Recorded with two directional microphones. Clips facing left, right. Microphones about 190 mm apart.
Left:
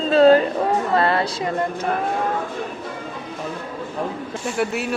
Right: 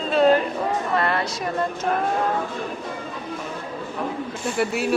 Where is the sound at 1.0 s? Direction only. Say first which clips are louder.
Left 4 dB; 30° left (ahead or behind).